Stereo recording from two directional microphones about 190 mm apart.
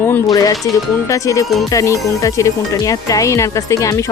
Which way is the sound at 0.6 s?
15° left (ahead or behind).